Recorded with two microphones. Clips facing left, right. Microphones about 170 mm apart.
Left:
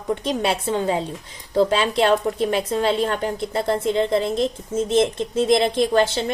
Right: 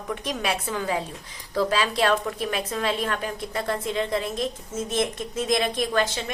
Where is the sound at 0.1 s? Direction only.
25° left (ahead or behind).